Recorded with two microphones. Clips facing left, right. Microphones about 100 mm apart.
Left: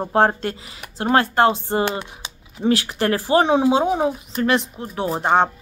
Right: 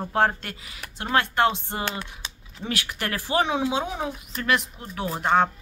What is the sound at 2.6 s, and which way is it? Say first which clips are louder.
Speech: left 10 dB; 30° left (ahead or behind).